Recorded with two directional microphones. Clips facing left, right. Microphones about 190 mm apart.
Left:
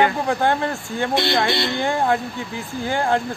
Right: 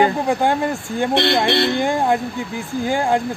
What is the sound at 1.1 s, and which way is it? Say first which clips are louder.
Speech: right 3 dB; 65° right (ahead or behind).